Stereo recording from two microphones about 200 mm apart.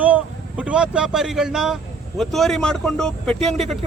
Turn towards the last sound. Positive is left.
turn(degrees=0)  # may be behind; listen again after turning